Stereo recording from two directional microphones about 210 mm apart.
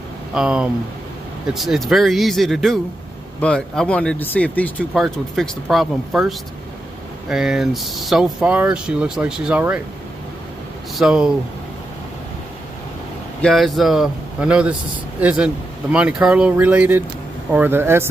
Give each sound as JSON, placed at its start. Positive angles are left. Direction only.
{"t": 0.3, "sound": "speech", "side_deg": -5}
{"t": 11.0, "sound": "speech", "side_deg": -5}
{"t": 13.4, "sound": "speech", "side_deg": 0}